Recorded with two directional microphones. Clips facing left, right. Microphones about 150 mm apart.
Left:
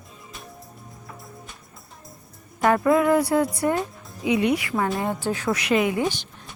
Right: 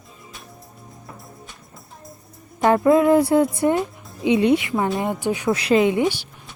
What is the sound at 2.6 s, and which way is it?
Speech, 25° right (ahead or behind).